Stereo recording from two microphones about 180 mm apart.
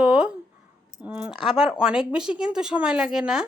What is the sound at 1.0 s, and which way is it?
Speech, 5° right (ahead or behind).